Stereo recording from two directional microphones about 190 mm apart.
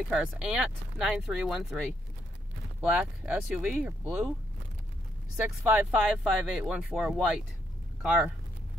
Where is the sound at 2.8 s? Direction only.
5° right (ahead or behind).